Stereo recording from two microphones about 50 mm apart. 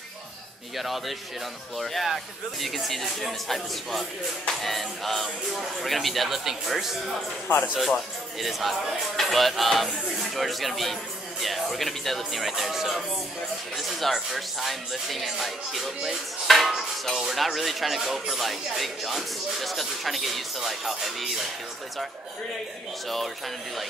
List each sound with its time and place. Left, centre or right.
0.7 s speech: centre
7.4 s speech: left
7.7 s speech: centre
23.0 s speech: centre